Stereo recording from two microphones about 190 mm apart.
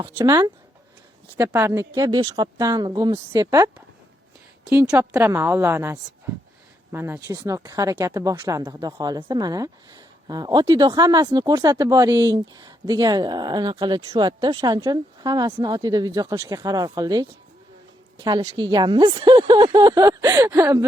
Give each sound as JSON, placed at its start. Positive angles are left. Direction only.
{"t": 0.2, "sound": "speech", "side_deg": -20}